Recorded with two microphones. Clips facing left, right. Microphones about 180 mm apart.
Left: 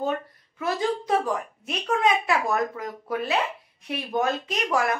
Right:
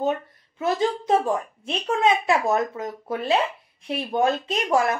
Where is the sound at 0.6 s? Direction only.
25° right (ahead or behind).